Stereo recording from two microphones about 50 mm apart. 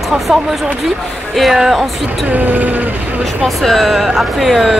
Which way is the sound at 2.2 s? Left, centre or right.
Right.